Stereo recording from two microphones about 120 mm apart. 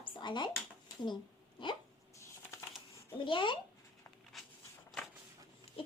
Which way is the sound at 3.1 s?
45° left (ahead or behind).